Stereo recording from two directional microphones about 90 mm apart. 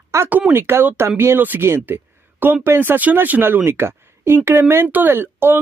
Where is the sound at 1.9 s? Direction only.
25° right (ahead or behind).